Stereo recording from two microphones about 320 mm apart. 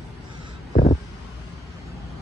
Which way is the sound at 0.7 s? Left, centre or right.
Left.